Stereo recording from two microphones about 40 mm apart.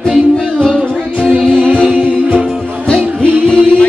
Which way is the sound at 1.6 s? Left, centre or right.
Right.